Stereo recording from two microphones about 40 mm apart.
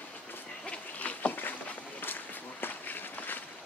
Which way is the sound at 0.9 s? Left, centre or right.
Left.